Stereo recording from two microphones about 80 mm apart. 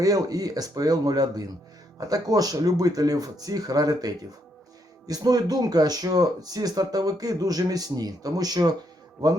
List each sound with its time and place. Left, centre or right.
0.0 s speech: right